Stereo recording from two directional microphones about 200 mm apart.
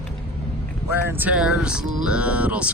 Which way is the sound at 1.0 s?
10° right (ahead or behind).